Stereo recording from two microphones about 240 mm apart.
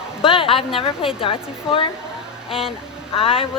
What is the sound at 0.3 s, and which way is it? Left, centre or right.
Speech, left.